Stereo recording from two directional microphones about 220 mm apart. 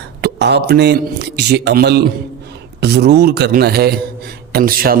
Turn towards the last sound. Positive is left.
turn(degrees=-40)  # may be behind; listen again after turning